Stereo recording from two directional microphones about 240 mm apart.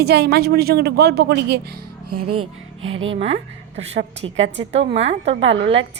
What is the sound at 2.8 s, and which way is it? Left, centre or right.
Speech, right.